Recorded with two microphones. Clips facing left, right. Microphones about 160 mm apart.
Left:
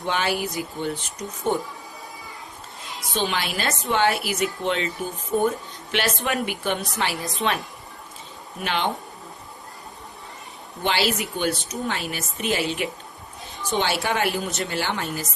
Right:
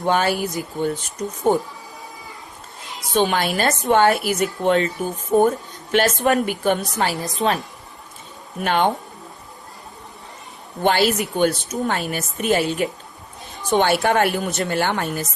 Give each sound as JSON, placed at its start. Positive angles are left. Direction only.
{"t": 0.0, "sound": "a woman's voice", "side_deg": -45}
{"t": 1.5, "sound": "a woman's voice", "side_deg": -40}
{"t": 3.1, "sound": "a woman's voice", "side_deg": -50}
{"t": 4.9, "sound": "speech", "side_deg": 0}
{"t": 5.4, "sound": "a woman's voice", "side_deg": -45}
{"t": 10.8, "sound": "a woman's voice", "side_deg": -50}